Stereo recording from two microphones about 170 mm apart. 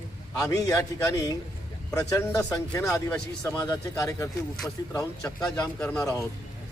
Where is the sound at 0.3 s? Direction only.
20° left (ahead or behind).